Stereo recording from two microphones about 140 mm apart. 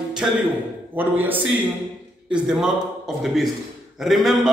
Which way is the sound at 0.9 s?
15° right (ahead or behind).